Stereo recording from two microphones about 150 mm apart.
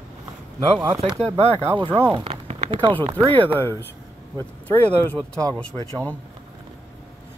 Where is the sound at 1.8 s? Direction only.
30° right (ahead or behind).